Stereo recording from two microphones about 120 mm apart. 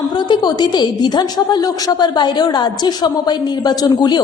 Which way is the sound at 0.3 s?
35° left (ahead or behind).